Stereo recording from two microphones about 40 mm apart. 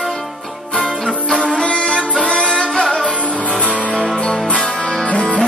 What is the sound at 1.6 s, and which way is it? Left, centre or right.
Music, left.